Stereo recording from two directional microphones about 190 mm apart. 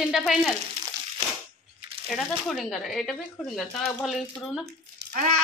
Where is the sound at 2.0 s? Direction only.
Centre (ahead or behind).